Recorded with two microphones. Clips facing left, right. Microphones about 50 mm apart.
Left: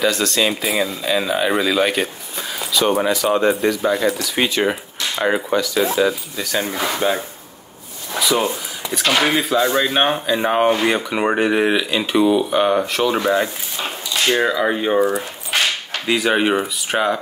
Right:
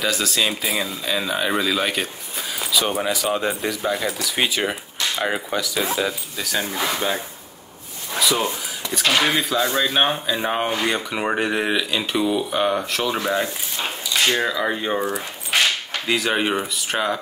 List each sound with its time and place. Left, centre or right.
0.0 s speech: centre
6.8 s speech: centre
8.9 s speech: centre
9.7 s speech: left
9.9 s speech: centre
16.1 s speech: centre